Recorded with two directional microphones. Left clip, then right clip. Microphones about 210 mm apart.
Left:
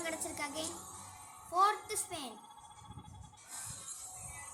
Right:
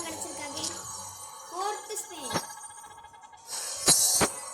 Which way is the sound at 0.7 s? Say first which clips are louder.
Right 8 dB; 30° right (ahead or behind).